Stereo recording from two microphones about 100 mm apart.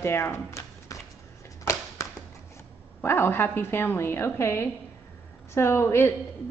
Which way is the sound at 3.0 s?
25° left (ahead or behind).